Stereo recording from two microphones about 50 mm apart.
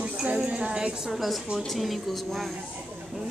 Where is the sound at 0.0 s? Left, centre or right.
Right.